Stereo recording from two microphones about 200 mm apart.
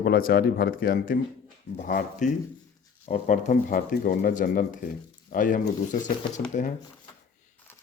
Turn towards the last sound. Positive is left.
turn(degrees=40)  # may be behind; listen again after turning